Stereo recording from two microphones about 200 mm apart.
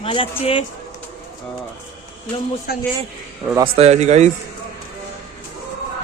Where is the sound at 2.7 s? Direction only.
50° left (ahead or behind).